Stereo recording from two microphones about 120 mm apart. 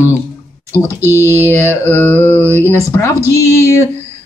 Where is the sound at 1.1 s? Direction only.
20° right (ahead or behind).